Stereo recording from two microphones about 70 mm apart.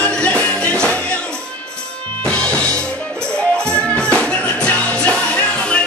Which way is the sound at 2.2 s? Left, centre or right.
Centre.